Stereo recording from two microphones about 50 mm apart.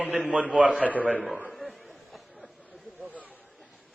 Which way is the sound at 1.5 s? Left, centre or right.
Centre.